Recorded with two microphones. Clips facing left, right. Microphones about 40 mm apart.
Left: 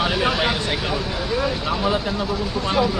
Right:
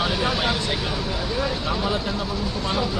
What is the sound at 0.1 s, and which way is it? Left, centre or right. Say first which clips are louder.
Vehicle: left 3 dB; left.